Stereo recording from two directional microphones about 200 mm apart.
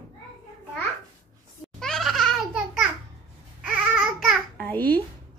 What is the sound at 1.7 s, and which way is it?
Babbling, centre (ahead or behind).